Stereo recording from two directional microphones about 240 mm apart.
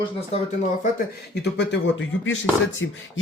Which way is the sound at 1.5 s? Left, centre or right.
Left.